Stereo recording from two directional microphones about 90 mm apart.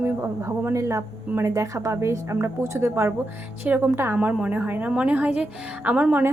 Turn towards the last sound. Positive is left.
turn(degrees=-15)  # may be behind; listen again after turning